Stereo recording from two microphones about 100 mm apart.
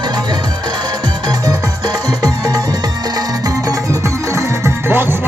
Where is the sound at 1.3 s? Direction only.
40° right (ahead or behind).